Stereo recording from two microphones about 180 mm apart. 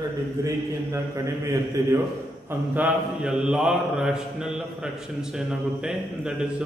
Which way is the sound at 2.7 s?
5° right (ahead or behind).